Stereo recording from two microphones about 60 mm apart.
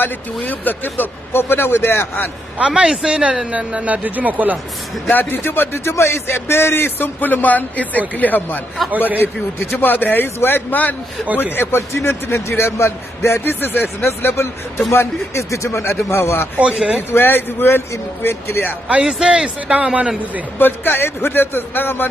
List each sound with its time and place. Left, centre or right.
0.0 s speech: left
2.6 s a man's voice: centre
5.3 s speech: left
11.5 s a man's voice: left
13.4 s a man's voice: left
16.5 s speech: centre
17.1 s speech: left
19.0 s a man's voice: centre
20.5 s speech: left